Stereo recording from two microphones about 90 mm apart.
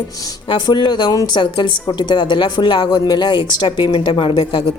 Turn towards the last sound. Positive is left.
turn(degrees=85)